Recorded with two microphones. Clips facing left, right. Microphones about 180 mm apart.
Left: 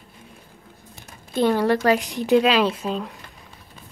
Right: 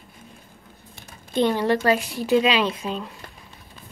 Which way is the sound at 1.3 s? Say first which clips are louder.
Left 1 dB; 10° left (ahead or behind).